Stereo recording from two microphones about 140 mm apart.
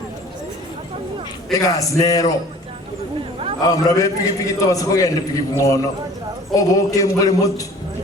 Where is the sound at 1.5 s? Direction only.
25° left (ahead or behind).